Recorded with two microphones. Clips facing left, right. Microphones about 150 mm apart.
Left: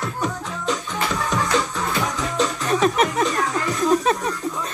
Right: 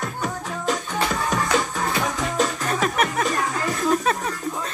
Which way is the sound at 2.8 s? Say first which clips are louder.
Left 4 dB; 35° left (ahead or behind).